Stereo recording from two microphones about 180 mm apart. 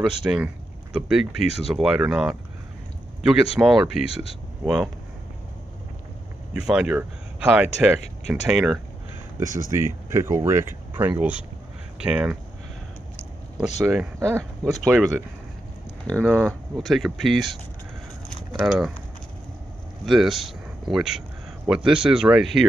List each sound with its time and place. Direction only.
0.0 s speech: 5° right (ahead or behind)
4.0 s speech: 30° left (ahead or behind)
6.5 s speech: 5° right (ahead or behind)
9.4 s speech: 20° right (ahead or behind)
14.7 s speech: centre (ahead or behind)
20.1 s speech: centre (ahead or behind)